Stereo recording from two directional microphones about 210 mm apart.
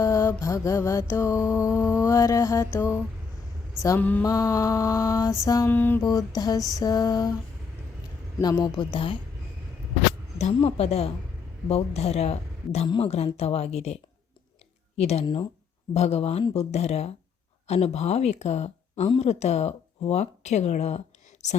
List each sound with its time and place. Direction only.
0.0 s mantra: 15° left (ahead or behind)
8.4 s a woman's voice: 20° left (ahead or behind)
10.3 s a woman's voice: 30° left (ahead or behind)